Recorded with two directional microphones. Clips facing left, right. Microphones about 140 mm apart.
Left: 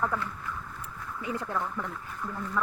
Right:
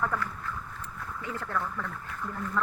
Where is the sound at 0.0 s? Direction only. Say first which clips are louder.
Even; 20° left (ahead or behind).